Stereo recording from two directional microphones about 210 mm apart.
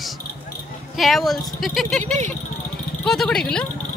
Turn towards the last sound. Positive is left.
turn(degrees=5)  # may be behind; listen again after turning